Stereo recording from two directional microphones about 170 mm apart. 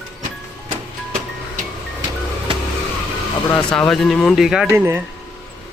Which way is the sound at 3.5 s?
5° left (ahead or behind).